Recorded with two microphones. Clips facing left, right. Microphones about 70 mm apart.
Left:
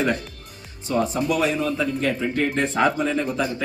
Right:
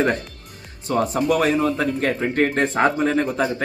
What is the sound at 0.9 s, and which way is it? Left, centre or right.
A man's voice, right.